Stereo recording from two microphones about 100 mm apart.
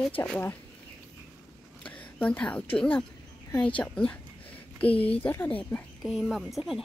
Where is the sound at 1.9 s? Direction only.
15° left (ahead or behind).